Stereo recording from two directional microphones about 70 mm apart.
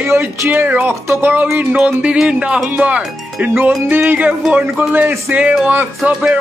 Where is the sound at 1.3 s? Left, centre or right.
Right.